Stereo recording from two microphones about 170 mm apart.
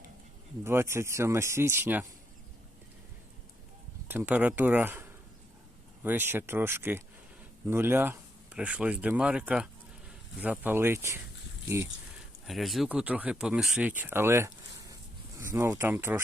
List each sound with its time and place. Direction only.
0.6 s speech: 15° right (ahead or behind)
4.1 s speech: 10° right (ahead or behind)
12.5 s speech: centre (ahead or behind)